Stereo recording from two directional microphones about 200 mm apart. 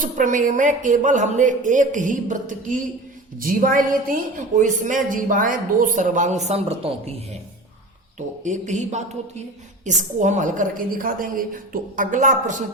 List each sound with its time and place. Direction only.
0.0 s a woman's voice: 40° right (ahead or behind)
8.4 s a woman's voice: 35° right (ahead or behind)